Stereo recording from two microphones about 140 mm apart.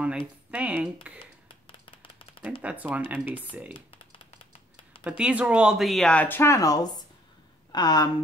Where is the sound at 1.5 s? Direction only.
35° left (ahead or behind).